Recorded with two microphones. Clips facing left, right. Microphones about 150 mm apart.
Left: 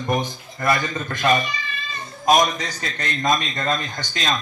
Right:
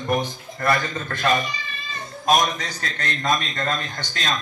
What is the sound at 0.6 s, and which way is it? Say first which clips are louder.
Speech: left 1 dB; 15° left (ahead or behind).